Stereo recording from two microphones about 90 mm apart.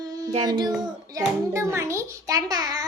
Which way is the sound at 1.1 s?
35° right (ahead or behind).